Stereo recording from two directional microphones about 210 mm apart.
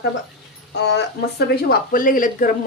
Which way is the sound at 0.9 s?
50° left (ahead or behind).